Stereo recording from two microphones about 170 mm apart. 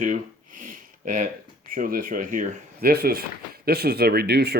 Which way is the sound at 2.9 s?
65° right (ahead or behind).